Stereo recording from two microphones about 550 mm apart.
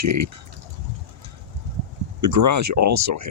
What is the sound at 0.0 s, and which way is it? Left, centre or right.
Speech, right.